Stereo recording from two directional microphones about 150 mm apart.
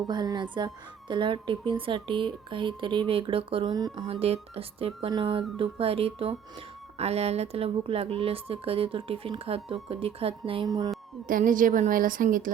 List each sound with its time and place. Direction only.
0.1 s a woman's voice: 30° right (ahead or behind)
4.0 s a woman's voice: 40° right (ahead or behind)
10.7 s music: 25° right (ahead or behind)
11.3 s a woman's voice: 65° right (ahead or behind)